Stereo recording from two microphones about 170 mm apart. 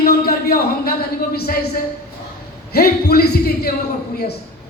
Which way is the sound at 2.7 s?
65° left (ahead or behind).